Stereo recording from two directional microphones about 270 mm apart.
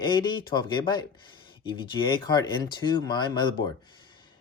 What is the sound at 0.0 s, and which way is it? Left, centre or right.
Speech, centre.